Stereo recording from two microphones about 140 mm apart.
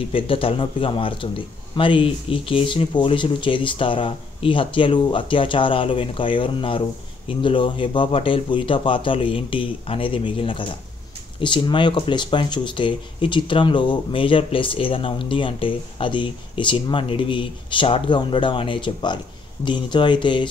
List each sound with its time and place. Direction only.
0.1 s speech: 40° left (ahead or behind)